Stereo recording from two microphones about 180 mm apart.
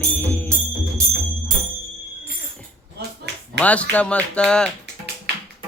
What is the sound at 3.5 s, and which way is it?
Speech, 5° left (ahead or behind).